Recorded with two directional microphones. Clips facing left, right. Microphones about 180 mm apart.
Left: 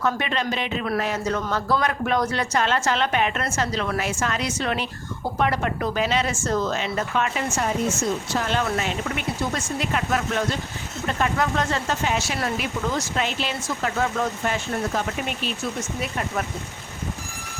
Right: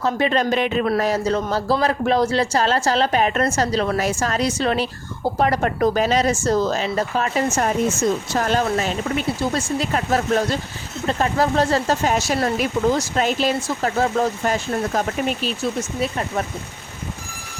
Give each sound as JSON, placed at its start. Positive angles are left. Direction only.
{"t": 0.0, "sound": "speech", "side_deg": -35}
{"t": 0.5, "sound": "speech", "side_deg": -50}
{"t": 0.9, "sound": "speech", "side_deg": -35}